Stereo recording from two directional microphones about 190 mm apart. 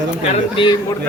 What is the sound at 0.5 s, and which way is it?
Speech, 25° left (ahead or behind).